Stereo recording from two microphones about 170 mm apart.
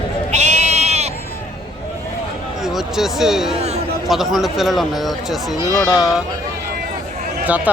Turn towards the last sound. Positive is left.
turn(degrees=-10)  # may be behind; listen again after turning